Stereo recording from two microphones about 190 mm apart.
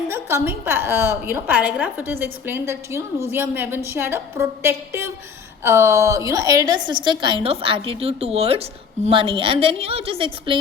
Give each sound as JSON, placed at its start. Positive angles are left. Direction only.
{"t": 0.1, "sound": "a woman's voice", "side_deg": -10}